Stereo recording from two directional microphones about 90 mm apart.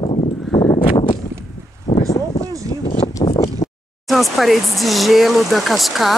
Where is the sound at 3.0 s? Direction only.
35° left (ahead or behind).